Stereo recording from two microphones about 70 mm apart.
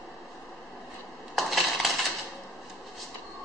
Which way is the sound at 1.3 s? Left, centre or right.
Centre.